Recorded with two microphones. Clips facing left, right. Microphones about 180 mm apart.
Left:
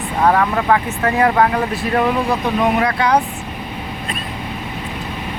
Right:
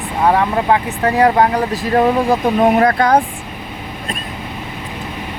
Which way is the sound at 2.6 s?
45° right (ahead or behind).